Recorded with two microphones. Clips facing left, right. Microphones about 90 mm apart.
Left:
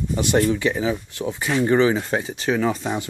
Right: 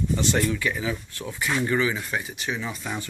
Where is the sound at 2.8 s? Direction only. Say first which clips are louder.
Left 6 dB; 25° left (ahead or behind).